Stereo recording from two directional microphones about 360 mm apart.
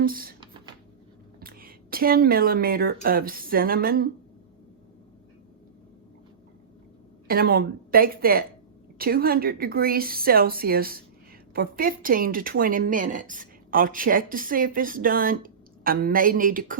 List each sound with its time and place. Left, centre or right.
0.0 s speech: right
1.4 s speech: right
7.3 s speech: right